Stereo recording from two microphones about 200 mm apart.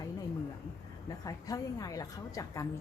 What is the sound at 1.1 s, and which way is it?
A woman's voice, 15° left (ahead or behind).